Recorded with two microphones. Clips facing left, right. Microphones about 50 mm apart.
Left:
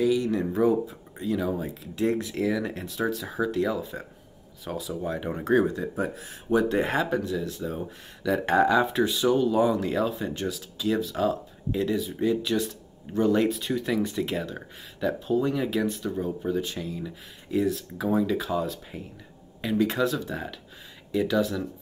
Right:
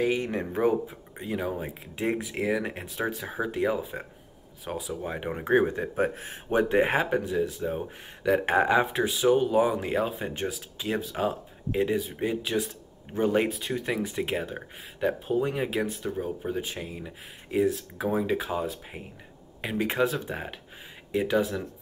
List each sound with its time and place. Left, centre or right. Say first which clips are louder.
0.0 s speech: left 3 dB; right
4.6 s speech: left 2 dB; centre; by 6.6 s right
6.6 s speech: right 1 dB; right
8.9 s speech: even; centre; by 12.4 s right
12.4 s speech: left 2 dB; centre
13.2 s speech: left 2 dB; right
13.5 s speech: left 3 dB; centre
13.7 s speech: left 3 dB; centre
16.0 s speech: left 2 dB; centre